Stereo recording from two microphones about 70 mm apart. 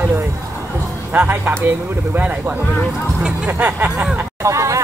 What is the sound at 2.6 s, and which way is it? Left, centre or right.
Speech, centre.